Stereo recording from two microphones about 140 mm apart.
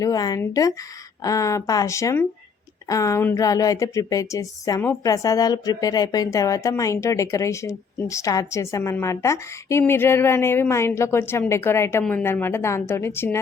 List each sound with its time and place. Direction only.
0.0 s a woman's voice: 25° left (ahead or behind)